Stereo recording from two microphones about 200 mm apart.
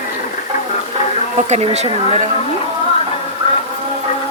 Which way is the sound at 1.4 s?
35° right (ahead or behind).